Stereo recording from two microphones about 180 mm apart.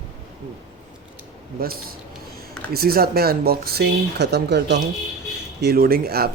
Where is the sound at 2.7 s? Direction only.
55° right (ahead or behind).